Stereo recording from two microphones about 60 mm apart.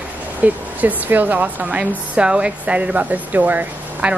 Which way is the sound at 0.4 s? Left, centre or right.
Right.